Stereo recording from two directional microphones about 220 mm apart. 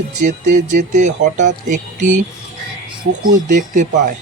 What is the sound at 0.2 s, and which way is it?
Speech, 35° right (ahead or behind).